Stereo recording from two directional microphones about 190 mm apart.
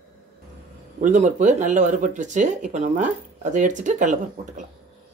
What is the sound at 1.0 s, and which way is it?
Speech, 40° right (ahead or behind).